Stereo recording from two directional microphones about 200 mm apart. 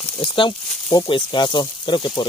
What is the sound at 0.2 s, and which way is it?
Speech, 25° left (ahead or behind).